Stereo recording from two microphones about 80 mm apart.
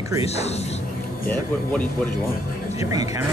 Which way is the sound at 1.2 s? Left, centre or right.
Centre.